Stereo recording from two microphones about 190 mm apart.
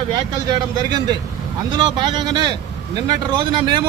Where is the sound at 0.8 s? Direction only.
20° right (ahead or behind).